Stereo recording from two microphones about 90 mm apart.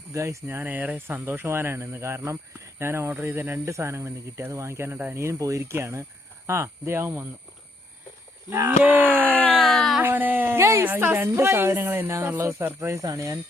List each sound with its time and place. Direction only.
0.1 s speech: 35° right (ahead or behind)
5.1 s speech: 35° right (ahead or behind)
8.4 s speech: 25° right (ahead or behind)
9.2 s a sound: 15° left (ahead or behind)
9.6 s a sound: centre (ahead or behind)
10.0 s speech: 20° right (ahead or behind); by 13.3 s 35° right (ahead or behind)